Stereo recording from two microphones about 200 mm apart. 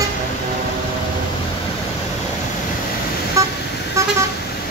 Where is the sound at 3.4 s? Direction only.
15° right (ahead or behind).